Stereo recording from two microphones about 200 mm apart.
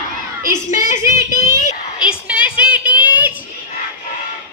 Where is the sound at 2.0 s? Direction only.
5° right (ahead or behind).